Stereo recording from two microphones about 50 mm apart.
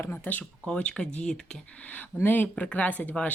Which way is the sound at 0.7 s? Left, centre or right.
Centre.